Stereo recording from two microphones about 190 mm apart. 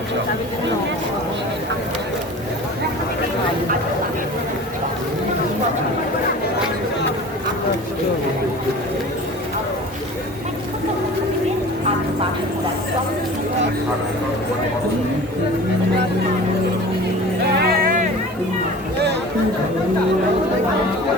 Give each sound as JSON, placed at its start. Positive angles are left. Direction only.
{"t": 17.6, "sound": "vehicle", "side_deg": -50}